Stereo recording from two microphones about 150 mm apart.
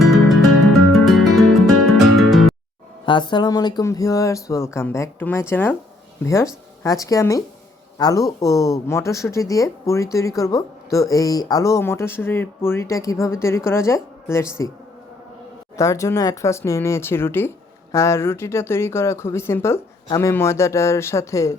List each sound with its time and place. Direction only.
1.0 s music: centre (ahead or behind)
3.1 s speech: 30° left (ahead or behind)
15.8 s speech: 20° left (ahead or behind)